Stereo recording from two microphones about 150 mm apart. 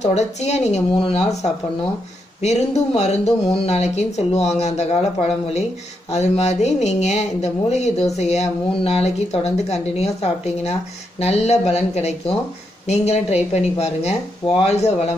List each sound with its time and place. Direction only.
0.0 s speech: 50° left (ahead or behind)